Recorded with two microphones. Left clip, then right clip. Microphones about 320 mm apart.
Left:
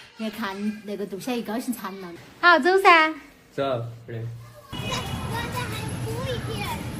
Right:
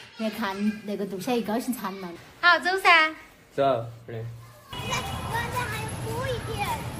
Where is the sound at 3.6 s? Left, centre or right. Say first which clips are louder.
Right 3 dB; right.